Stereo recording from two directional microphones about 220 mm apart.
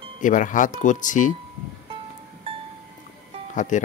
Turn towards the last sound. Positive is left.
turn(degrees=35)  # may be behind; listen again after turning